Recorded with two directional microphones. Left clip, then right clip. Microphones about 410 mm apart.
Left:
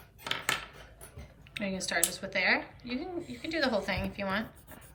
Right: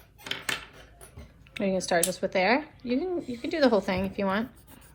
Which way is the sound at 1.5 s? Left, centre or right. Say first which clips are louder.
Right 7 dB; centre.